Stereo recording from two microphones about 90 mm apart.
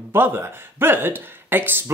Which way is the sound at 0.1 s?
30° right (ahead or behind).